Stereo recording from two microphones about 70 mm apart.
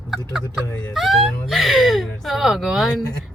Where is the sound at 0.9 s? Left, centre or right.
Centre.